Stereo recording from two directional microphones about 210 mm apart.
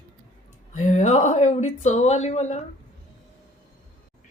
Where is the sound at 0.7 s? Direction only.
35° left (ahead or behind).